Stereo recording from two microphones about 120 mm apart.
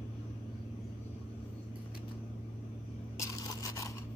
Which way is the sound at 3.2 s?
25° left (ahead or behind).